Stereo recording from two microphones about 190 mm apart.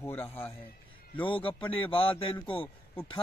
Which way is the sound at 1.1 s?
25° left (ahead or behind).